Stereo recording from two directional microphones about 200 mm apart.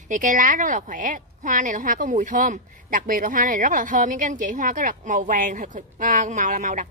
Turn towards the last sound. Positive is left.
turn(degrees=-40)  # may be behind; listen again after turning